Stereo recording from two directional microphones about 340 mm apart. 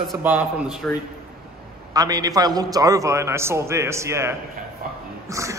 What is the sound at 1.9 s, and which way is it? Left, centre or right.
A man's voice, centre.